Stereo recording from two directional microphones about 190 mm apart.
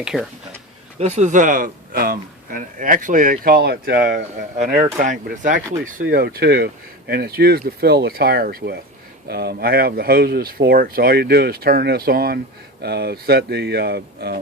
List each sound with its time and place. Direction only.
0.0 s speech: 5° right (ahead or behind)
0.9 s speech: 35° right (ahead or behind); by 14.3 s 55° right (ahead or behind)